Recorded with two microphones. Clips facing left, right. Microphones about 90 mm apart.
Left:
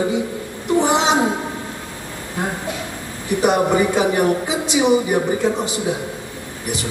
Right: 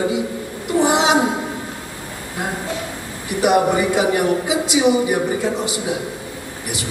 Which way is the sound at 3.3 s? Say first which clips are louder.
Right 1 dB; 15° right (ahead or behind).